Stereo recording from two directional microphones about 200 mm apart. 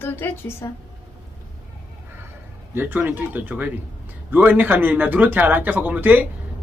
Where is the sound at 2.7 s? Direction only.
10° right (ahead or behind).